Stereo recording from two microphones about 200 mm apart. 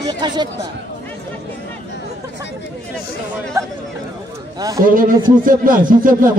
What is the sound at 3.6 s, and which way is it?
Speech, 15° right (ahead or behind).